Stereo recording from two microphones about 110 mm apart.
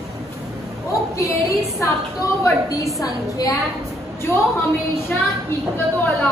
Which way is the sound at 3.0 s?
35° left (ahead or behind).